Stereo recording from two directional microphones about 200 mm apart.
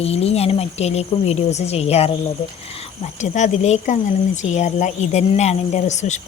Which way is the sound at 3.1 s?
35° left (ahead or behind).